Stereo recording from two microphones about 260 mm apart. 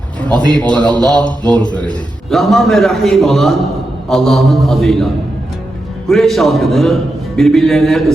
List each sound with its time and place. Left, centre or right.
0.5 s a man's voice: centre
6.1 s a man's voice: centre